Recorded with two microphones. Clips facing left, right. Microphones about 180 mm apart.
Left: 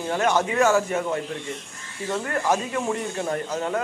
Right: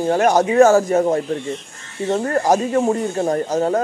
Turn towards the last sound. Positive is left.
turn(degrees=-40)  # may be behind; listen again after turning